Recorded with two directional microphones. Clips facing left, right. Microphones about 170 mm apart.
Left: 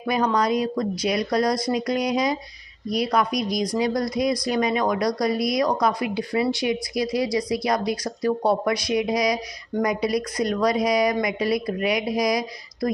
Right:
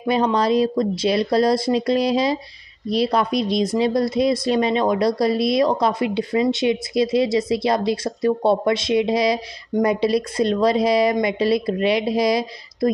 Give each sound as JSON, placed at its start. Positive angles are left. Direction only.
{"t": 0.0, "sound": "speech", "side_deg": -25}